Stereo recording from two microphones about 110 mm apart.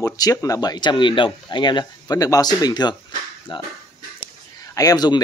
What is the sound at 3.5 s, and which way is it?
Speech, 50° left (ahead or behind).